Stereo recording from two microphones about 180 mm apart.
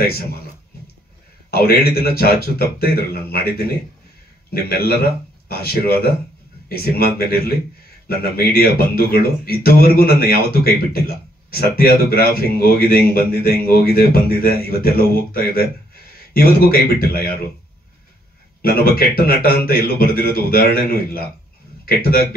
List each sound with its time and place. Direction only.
1.5 s a man's voice: 60° left (ahead or behind)
4.6 s a man's voice: 60° left (ahead or behind)
18.6 s a man's voice: 55° left (ahead or behind)